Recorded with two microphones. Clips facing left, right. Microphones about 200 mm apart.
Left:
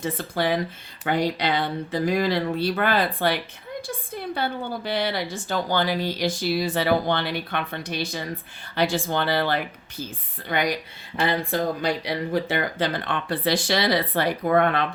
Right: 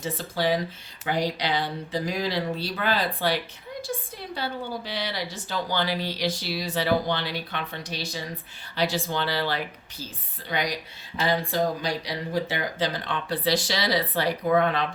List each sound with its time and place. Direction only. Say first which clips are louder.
0.0 s a woman's voice: left 2 dB; 55° left (ahead or behind)